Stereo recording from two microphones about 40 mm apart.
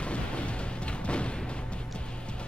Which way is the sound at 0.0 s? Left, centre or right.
Left.